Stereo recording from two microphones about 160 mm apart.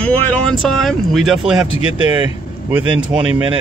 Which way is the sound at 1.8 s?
30° right (ahead or behind).